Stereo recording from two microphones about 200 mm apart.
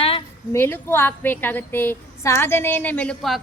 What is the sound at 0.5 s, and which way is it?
A woman's voice, 10° left (ahead or behind).